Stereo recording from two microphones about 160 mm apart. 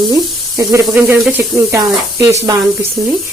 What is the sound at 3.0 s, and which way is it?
Speech, 5° right (ahead or behind).